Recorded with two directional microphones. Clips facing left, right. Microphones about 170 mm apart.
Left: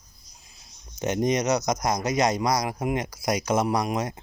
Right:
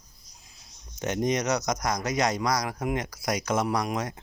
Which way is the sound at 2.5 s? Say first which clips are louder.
Left 2 dB; 10° left (ahead or behind).